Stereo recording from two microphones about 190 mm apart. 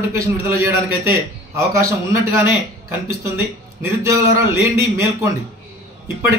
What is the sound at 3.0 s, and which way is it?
A man's voice, 15° right (ahead or behind).